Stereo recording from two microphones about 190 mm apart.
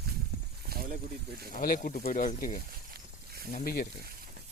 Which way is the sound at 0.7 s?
55° right (ahead or behind).